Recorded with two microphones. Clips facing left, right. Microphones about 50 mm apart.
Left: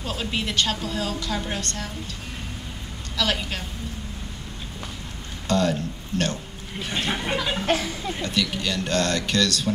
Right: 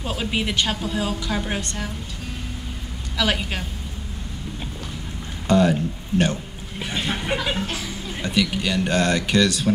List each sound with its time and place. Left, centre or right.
0.0 s a woman's voice: centre
3.2 s a woman's voice: centre
5.5 s speech: centre
6.8 s a sound: centre
7.6 s speech: left
8.2 s a woman's voice: centre